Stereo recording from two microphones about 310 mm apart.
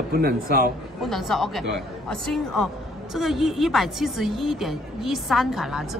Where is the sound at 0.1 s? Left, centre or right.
Right.